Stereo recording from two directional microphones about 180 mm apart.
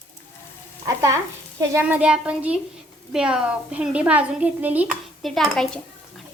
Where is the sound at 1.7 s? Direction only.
10° right (ahead or behind).